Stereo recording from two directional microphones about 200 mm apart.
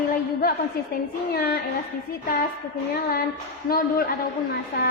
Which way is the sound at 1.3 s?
45° left (ahead or behind).